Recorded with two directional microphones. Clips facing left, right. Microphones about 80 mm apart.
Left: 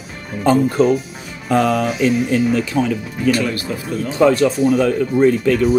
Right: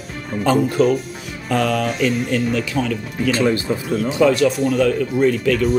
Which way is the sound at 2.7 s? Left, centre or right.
Left.